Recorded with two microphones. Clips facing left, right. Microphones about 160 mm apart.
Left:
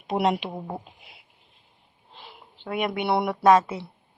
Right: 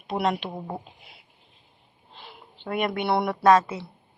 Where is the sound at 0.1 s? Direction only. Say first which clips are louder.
Left 2 dB; 15° left (ahead or behind).